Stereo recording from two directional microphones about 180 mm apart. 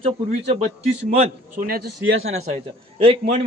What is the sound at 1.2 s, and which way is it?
Speech, 50° right (ahead or behind).